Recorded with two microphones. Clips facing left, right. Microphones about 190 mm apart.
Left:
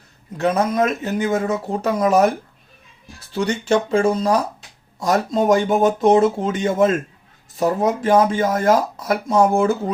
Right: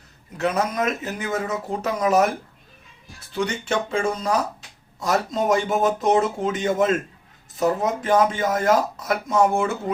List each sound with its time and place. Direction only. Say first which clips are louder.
0.3 s speech: left 5 dB; 35° left (ahead or behind)
3.3 s speech: left 5 dB; 35° left (ahead or behind)